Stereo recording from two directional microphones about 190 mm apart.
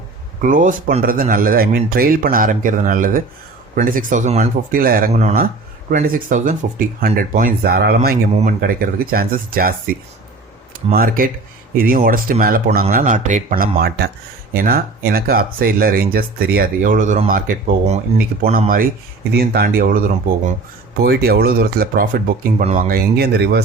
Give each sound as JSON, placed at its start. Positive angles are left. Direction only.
{"t": 0.4, "sound": "speech", "side_deg": -45}
{"t": 10.9, "sound": "speech", "side_deg": -50}
{"t": 13.7, "sound": "speech", "side_deg": -55}
{"t": 19.3, "sound": "speech", "side_deg": -55}